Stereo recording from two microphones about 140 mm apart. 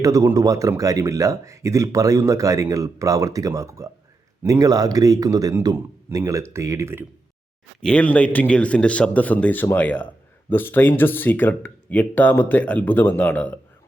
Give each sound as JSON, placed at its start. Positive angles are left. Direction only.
{"t": 0.0, "sound": "speech", "side_deg": -25}
{"t": 7.8, "sound": "speech", "side_deg": 5}